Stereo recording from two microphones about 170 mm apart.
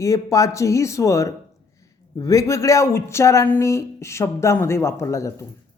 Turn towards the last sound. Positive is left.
turn(degrees=15)  # may be behind; listen again after turning